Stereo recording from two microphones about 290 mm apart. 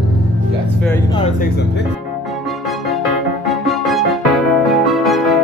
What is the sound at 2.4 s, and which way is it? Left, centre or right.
Music, centre.